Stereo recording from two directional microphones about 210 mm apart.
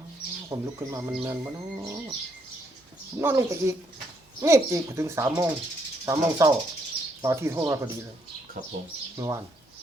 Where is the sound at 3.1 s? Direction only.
15° right (ahead or behind).